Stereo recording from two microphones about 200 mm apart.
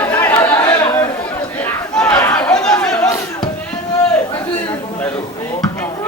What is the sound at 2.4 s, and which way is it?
Chatter, 5° left (ahead or behind).